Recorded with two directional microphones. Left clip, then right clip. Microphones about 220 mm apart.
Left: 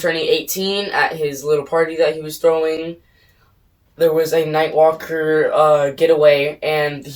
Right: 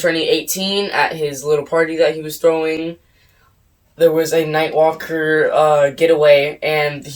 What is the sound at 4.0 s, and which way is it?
Speech, 15° right (ahead or behind).